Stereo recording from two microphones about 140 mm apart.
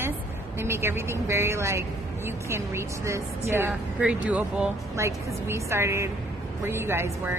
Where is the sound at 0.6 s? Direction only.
20° right (ahead or behind).